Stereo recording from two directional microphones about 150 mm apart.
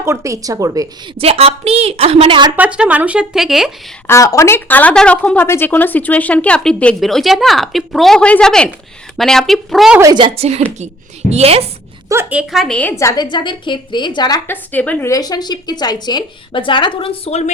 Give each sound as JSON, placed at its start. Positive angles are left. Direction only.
{"t": 0.0, "sound": "speech", "side_deg": -20}
{"t": 1.2, "sound": "a woman's voice", "side_deg": -40}
{"t": 2.6, "sound": "speech", "side_deg": -10}
{"t": 4.0, "sound": "a woman's voice", "side_deg": 20}
{"t": 10.0, "sound": "a woman's voice", "side_deg": -30}
{"t": 12.3, "sound": "a woman's voice", "side_deg": -5}
{"t": 13.0, "sound": "a woman's voice", "side_deg": 20}
{"t": 13.2, "sound": "speech", "side_deg": 30}
{"t": 14.4, "sound": "speech", "side_deg": 10}
{"t": 15.1, "sound": "speech", "side_deg": 25}